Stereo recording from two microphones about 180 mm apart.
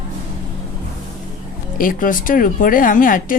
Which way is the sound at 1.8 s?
50° left (ahead or behind).